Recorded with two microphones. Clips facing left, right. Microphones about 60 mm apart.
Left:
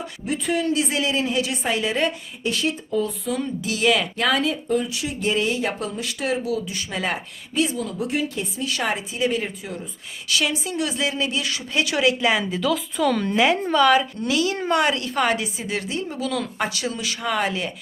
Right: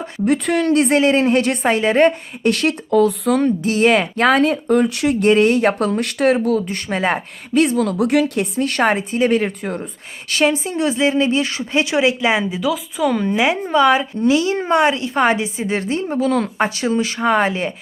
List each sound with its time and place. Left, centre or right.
0.3 s speech: right
2.5 s speech: right
3.6 s a woman's voice: right
4.5 s speech: right
7.5 s a woman's voice: right
12.5 s a woman's voice: centre; by 17.7 s right